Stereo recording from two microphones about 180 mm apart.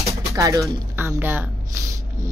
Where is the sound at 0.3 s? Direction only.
15° right (ahead or behind).